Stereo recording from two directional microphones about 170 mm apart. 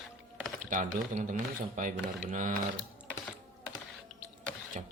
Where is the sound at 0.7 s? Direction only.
50° right (ahead or behind).